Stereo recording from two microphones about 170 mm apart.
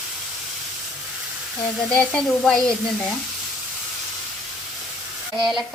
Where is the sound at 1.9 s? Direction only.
5° left (ahead or behind).